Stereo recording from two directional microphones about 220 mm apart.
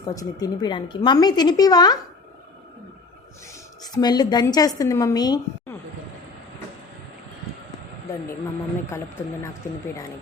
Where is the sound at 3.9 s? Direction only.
20° left (ahead or behind).